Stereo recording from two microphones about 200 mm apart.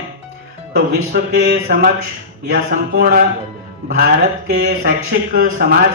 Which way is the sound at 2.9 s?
50° right (ahead or behind).